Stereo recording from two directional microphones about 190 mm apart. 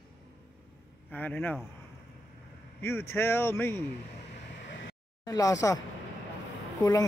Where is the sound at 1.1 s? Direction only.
10° left (ahead or behind).